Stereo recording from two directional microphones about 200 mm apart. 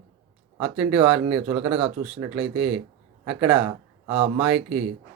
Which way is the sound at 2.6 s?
5° right (ahead or behind).